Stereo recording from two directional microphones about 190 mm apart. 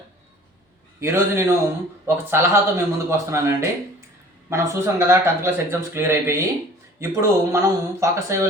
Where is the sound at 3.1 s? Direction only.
15° right (ahead or behind).